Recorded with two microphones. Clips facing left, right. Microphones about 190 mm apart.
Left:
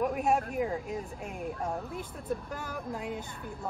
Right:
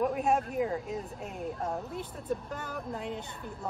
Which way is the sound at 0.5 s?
Centre (ahead or behind).